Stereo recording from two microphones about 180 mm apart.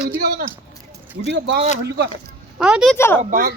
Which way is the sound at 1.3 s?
75° right (ahead or behind).